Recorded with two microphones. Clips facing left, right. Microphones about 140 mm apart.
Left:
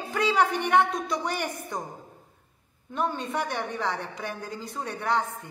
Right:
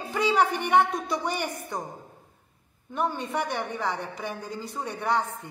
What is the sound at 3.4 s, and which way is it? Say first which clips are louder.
A woman's voice: even; 20° right (ahead or behind).